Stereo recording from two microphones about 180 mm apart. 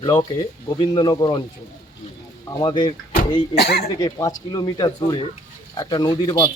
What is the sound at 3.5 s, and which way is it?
Speech, 60° left (ahead or behind).